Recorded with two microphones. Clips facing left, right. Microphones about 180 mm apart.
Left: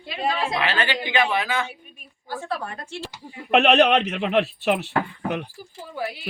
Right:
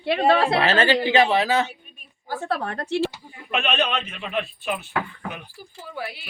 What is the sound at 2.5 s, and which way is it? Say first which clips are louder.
Speech: right 7 dB; 65° right (ahead or behind).